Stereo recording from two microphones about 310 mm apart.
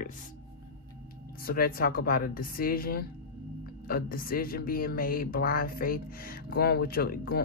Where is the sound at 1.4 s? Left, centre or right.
Left.